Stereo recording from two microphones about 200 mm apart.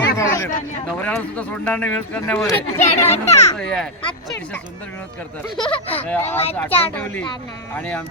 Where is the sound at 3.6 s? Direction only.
5° left (ahead or behind).